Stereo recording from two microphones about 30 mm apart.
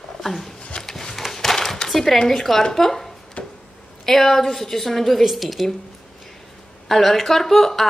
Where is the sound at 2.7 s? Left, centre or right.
Centre.